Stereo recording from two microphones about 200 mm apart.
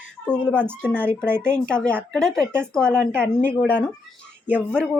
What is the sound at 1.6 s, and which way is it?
A woman's voice, 5° left (ahead or behind).